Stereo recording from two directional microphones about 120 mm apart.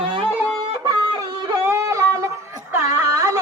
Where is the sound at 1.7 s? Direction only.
25° right (ahead or behind).